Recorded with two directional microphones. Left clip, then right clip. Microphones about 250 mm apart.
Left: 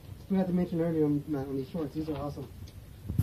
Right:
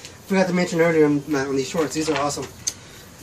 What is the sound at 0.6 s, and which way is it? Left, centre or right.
Speech, right.